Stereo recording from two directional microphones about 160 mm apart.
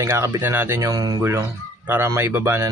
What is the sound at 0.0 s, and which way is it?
Speech, 15° right (ahead or behind).